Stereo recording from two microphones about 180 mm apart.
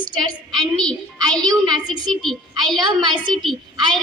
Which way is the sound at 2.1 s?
Centre (ahead or behind).